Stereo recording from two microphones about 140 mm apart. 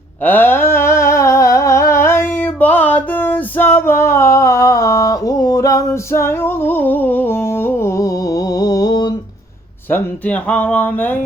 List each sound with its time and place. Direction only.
0.3 s humming: 15° left (ahead or behind); by 9.1 s 30° left (ahead or behind)
9.9 s speech: 10° left (ahead or behind)